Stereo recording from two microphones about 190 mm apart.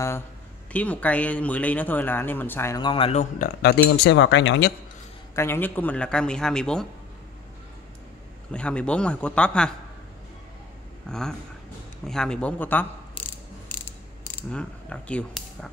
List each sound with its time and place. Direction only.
0.7 s speech: 5° left (ahead or behind)
2.8 s speech: 25° left (ahead or behind)
4.0 s speech: 70° left (ahead or behind)
5.3 s a man's voice: 10° left (ahead or behind)
8.5 s a man's voice: 5° left (ahead or behind)
11.1 s a man's voice: 5° left (ahead or behind)
14.5 s speech: 5° left (ahead or behind)